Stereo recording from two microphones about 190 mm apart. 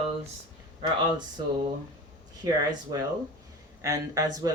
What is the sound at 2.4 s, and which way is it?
Speech, 25° right (ahead or behind).